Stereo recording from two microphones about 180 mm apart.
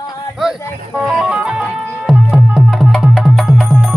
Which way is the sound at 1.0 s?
5° right (ahead or behind).